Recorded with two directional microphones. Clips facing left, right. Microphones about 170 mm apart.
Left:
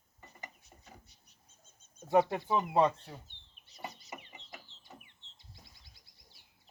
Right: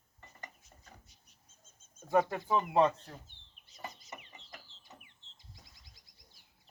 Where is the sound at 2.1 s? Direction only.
20° left (ahead or behind).